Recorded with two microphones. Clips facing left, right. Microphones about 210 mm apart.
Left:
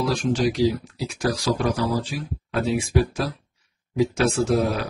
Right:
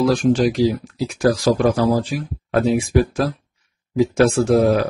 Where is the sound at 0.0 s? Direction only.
50° right (ahead or behind).